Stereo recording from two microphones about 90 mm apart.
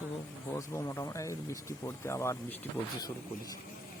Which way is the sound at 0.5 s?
35° left (ahead or behind).